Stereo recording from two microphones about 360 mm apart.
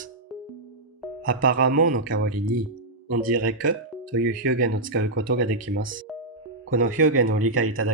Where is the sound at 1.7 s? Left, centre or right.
Right.